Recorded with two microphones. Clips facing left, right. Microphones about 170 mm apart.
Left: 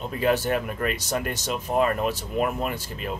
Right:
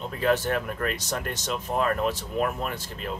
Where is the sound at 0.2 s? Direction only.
10° left (ahead or behind).